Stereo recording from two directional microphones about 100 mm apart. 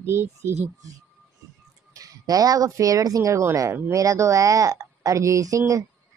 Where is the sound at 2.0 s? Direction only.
35° right (ahead or behind).